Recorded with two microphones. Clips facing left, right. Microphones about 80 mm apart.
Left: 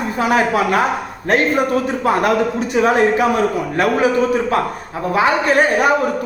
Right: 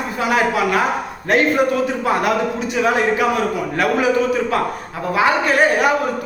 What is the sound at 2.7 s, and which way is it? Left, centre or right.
Speech, left.